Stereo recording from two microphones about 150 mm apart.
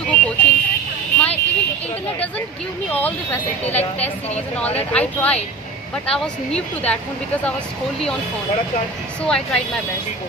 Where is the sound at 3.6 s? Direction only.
45° left (ahead or behind).